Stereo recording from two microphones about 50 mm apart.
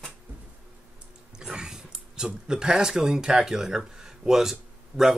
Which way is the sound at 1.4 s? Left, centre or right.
Centre.